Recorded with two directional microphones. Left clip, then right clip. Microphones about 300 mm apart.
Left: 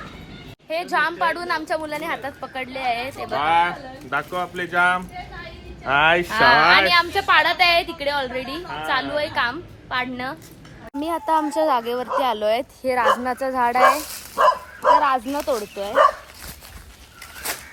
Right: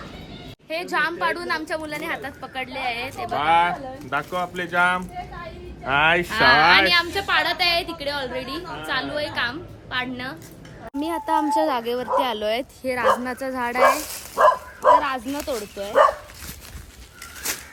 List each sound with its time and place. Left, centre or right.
0.7 s a woman's voice: centre
3.3 s speech: centre
6.3 s a woman's voice: centre
11.0 s a woman's voice: centre
14.3 s bow-wow: right
15.0 s a woman's voice: centre
17.5 s a sound: centre